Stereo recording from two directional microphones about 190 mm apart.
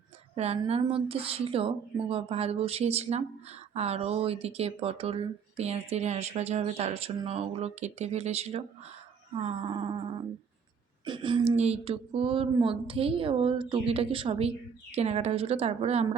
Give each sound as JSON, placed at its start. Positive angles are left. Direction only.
{"t": 0.3, "sound": "speech", "side_deg": -35}
{"t": 11.0, "sound": "speech", "side_deg": -25}